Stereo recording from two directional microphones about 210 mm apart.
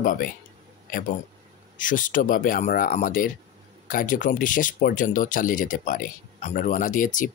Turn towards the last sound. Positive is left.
turn(degrees=40)  # may be behind; listen again after turning